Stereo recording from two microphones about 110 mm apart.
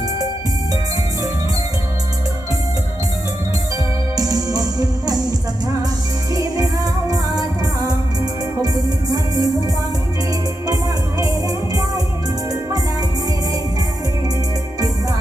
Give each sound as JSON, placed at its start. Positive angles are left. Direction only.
{"t": 4.2, "sound": "music", "side_deg": -35}
{"t": 6.3, "sound": "music", "side_deg": -35}
{"t": 11.2, "sound": "music", "side_deg": -35}